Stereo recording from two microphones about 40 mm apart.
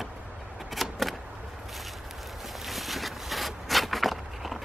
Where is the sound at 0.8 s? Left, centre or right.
Centre.